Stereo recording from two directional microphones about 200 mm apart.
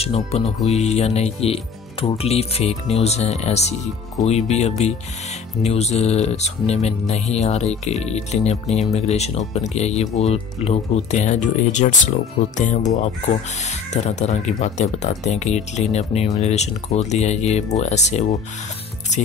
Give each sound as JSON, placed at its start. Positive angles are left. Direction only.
{"t": 0.0, "sound": "speech", "side_deg": 30}